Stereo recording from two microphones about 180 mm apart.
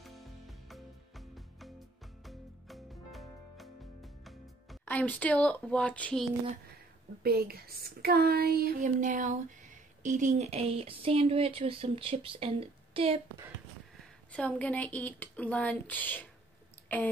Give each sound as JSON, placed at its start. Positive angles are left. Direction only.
{"t": 0.0, "sound": "music", "side_deg": 0}
{"t": 4.8, "sound": "speech", "side_deg": 10}
{"t": 7.2, "sound": "speech", "side_deg": -55}
{"t": 14.3, "sound": "speech", "side_deg": 5}